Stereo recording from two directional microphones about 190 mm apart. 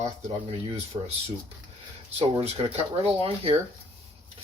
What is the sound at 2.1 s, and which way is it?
Speech, 30° right (ahead or behind).